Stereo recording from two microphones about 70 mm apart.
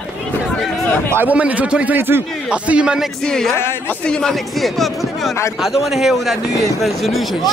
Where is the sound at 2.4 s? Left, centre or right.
Centre.